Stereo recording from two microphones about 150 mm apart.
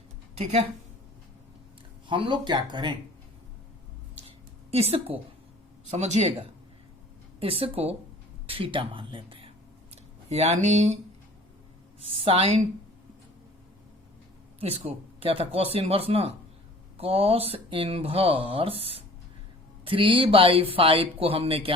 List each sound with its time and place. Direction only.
0.3 s speech: 40° right (ahead or behind)
2.0 s speech: 35° right (ahead or behind)
4.7 s speech: 40° right (ahead or behind)
12.0 s speech: 40° right (ahead or behind)
14.6 s speech: 40° right (ahead or behind)